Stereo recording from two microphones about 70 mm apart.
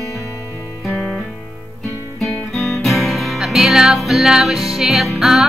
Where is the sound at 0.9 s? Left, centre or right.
Centre.